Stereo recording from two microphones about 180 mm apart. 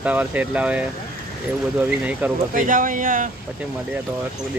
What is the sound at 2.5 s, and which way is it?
Speech, 50° right (ahead or behind).